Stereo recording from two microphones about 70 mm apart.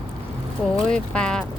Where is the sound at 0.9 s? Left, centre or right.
Centre.